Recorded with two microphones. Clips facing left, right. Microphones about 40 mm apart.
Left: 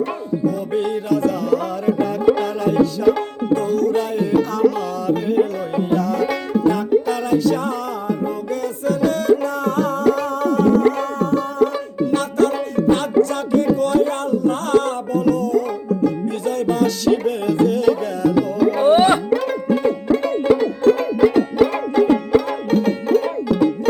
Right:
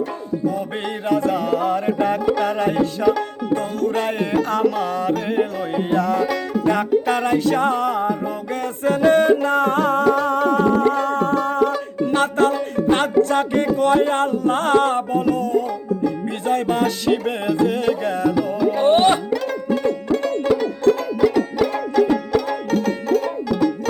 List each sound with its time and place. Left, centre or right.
0.4 s music: right
19.6 s music: centre